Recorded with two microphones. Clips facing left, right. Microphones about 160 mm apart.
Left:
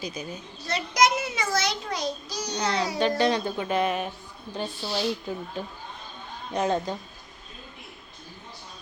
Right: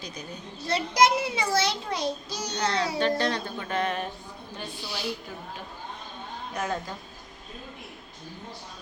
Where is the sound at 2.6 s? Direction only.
10° left (ahead or behind).